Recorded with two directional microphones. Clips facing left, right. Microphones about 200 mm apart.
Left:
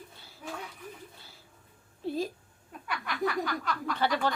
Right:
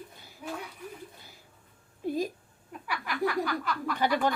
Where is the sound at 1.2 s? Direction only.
15° right (ahead or behind).